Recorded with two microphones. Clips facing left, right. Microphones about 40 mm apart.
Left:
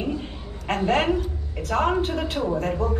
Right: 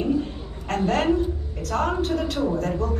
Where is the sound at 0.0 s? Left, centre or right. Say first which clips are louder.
Right 5 dB; left.